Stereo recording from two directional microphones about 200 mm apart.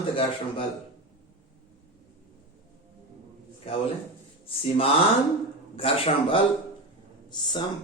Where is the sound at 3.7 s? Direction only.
30° left (ahead or behind).